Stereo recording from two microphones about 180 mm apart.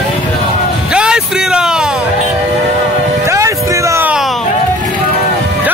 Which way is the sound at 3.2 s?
15° right (ahead or behind).